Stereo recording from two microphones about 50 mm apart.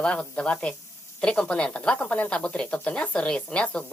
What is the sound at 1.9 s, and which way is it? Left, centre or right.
Speech, left.